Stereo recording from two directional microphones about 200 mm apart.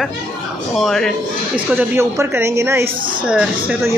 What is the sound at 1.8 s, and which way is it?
A woman's voice, 10° right (ahead or behind).